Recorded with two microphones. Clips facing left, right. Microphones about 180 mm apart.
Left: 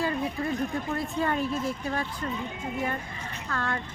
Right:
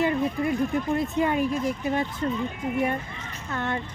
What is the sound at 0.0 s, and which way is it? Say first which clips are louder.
A woman's voice: right 5 dB; 20° right (ahead or behind).